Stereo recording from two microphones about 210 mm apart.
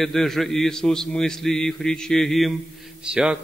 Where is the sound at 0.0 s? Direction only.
Centre (ahead or behind).